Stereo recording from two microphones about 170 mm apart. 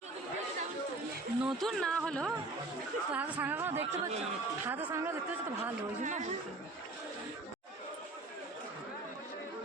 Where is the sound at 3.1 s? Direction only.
10° right (ahead or behind).